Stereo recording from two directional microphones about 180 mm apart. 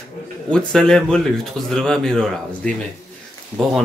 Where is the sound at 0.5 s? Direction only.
5° left (ahead or behind).